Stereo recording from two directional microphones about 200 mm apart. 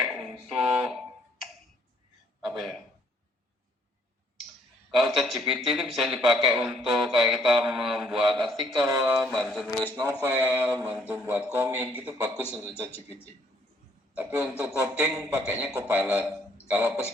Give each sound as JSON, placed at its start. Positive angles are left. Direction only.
{"t": 0.0, "sound": "finger snapping", "side_deg": 0}
{"t": 2.4, "sound": "a sound", "side_deg": 0}
{"t": 4.9, "sound": "a man's voice", "side_deg": 0}
{"t": 8.9, "sound": "a man's voice", "side_deg": -10}
{"t": 9.9, "sound": "a man's voice", "side_deg": -20}
{"t": 12.9, "sound": "speech", "side_deg": 10}
{"t": 14.2, "sound": "a man's voice", "side_deg": -5}